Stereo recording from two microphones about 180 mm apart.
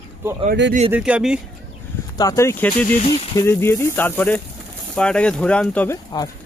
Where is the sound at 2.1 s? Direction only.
20° left (ahead or behind).